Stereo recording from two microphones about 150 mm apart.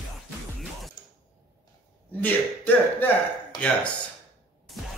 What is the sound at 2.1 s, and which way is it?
Speech, 10° left (ahead or behind).